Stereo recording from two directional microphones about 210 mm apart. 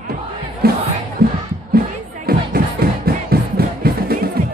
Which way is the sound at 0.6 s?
45° right (ahead or behind).